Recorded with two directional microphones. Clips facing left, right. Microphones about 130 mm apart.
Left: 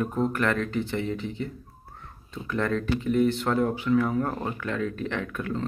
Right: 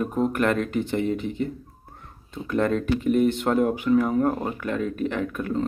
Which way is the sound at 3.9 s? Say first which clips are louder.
Right 2 dB; 35° right (ahead or behind).